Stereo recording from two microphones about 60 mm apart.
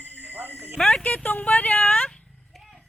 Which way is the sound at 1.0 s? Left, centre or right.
Left.